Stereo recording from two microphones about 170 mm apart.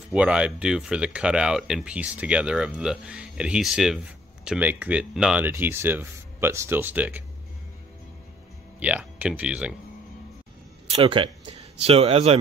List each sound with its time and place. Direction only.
0.1 s speech: 5° right (ahead or behind)
8.7 s speech: 10° right (ahead or behind)
10.9 s speech: 30° right (ahead or behind)